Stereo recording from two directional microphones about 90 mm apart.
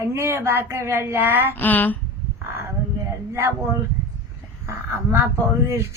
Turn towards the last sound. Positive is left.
turn(degrees=-30)  # may be behind; listen again after turning